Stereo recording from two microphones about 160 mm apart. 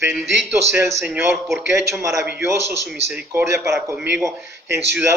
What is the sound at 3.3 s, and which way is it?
Speech, 15° right (ahead or behind).